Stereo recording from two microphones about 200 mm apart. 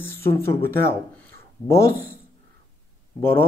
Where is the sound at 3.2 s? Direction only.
10° left (ahead or behind).